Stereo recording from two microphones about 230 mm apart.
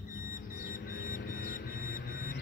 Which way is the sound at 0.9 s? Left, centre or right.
Left.